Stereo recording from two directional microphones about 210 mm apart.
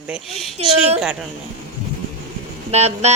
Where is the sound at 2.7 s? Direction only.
30° right (ahead or behind).